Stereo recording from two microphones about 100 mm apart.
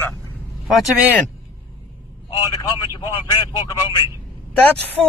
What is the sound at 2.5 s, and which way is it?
Speech, 40° left (ahead or behind).